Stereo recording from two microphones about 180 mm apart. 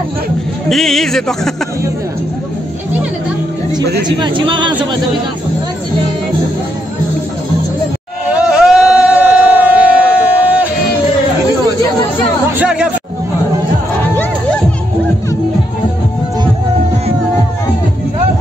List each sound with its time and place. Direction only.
0.7 s speech: centre (ahead or behind)
4.2 s speech: 25° right (ahead or behind)
8.3 s a sound: 5° right (ahead or behind)
12.5 s speech: 5° right (ahead or behind)